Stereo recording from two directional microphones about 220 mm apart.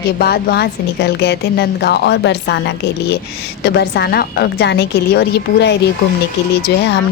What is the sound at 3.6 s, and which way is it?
A woman's voice, 50° left (ahead or behind).